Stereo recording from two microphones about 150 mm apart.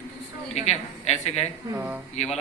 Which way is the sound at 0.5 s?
45° left (ahead or behind).